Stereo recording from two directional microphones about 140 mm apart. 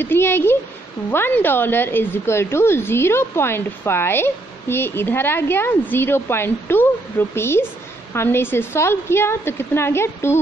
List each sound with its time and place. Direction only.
0.0 s speech: 15° left (ahead or behind)